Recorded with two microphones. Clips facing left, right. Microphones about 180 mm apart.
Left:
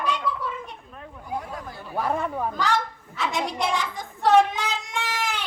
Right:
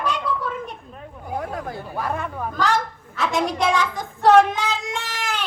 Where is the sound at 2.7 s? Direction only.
90° right.